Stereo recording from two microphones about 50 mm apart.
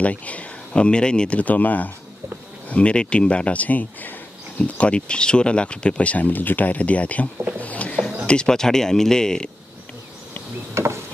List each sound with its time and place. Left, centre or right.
0.0 s speech: left
1.4 s speech: left
2.7 s speech: left
7.5 s a sound: left
8.3 s speech: centre
10.7 s a sound: right